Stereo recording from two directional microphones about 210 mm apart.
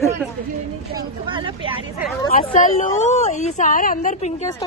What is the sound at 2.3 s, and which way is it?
A woman's voice, 40° left (ahead or behind).